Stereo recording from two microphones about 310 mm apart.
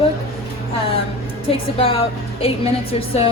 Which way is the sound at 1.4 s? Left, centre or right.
Centre.